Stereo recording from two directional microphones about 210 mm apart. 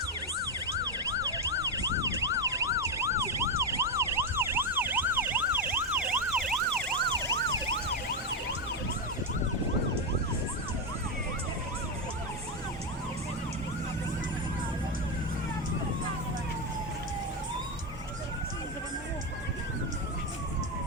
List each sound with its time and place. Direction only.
0.7 s emergency vehicle: 15° right (ahead or behind)
7.3 s emergency vehicle: 55° right (ahead or behind)